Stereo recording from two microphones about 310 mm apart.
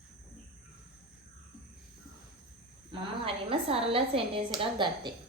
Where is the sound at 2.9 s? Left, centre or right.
Centre.